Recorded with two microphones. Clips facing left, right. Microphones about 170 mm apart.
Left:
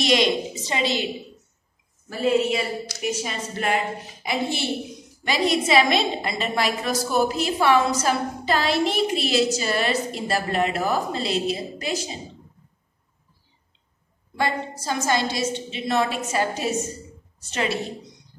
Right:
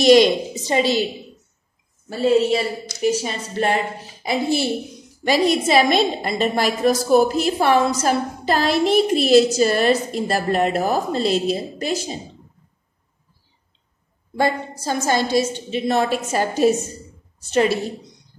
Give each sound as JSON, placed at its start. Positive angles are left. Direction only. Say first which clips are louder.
{"t": 0.0, "sound": "a woman's voice", "louder": "right 8 dB", "side_deg": -40}
{"t": 2.0, "sound": "a woman's voice", "louder": "right 4 dB", "side_deg": -30}
{"t": 14.3, "sound": "a woman's voice", "louder": "right 5 dB", "side_deg": -40}